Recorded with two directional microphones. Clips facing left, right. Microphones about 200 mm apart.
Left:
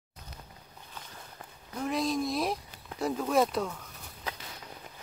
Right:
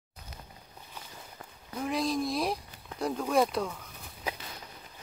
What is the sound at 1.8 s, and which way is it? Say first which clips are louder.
Speech: even; centre (ahead or behind).